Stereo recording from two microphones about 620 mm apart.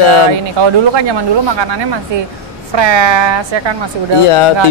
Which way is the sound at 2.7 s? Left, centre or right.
Right.